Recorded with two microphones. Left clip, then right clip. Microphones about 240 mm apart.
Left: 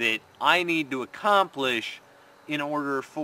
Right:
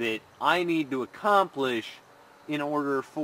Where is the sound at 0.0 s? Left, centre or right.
Centre.